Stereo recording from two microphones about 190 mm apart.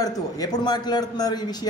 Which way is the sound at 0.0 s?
20° left (ahead or behind).